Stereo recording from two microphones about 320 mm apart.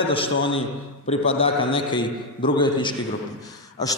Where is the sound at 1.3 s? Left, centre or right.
Centre.